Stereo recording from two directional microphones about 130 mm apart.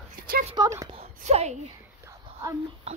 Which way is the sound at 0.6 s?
35° right (ahead or behind).